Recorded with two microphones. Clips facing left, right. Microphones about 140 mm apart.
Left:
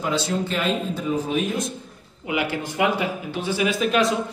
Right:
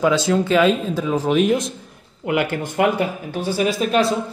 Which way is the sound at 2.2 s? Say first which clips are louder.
Right 4 dB; 55° right (ahead or behind).